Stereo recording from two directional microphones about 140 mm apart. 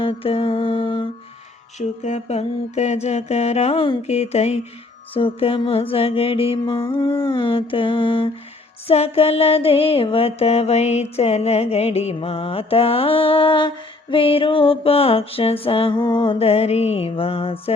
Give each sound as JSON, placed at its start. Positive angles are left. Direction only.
{"t": 0.0, "sound": "mantra", "side_deg": 40}
{"t": 1.8, "sound": "mantra", "side_deg": 55}